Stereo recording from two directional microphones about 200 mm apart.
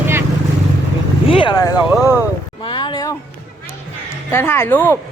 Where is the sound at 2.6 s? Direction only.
25° left (ahead or behind).